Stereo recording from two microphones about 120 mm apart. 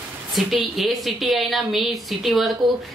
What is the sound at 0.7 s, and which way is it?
Speech, centre (ahead or behind).